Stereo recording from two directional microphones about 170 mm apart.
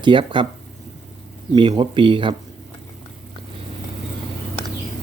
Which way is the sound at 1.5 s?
25° right (ahead or behind).